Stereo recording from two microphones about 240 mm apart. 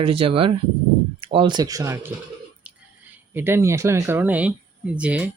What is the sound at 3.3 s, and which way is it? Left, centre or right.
Speech, centre.